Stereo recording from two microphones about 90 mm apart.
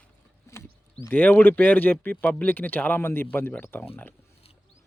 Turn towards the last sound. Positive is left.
turn(degrees=25)  # may be behind; listen again after turning